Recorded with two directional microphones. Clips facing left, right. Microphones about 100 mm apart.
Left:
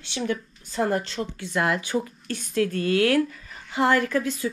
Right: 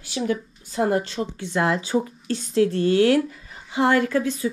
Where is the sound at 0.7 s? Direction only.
30° right (ahead or behind).